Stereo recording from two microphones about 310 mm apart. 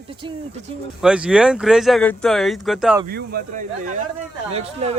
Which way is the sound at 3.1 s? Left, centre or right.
Right.